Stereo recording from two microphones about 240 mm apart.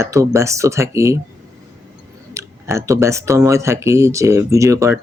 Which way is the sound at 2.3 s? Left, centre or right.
Centre.